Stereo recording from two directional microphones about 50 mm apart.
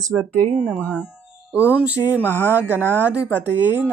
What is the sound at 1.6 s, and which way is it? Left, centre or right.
Speech, right.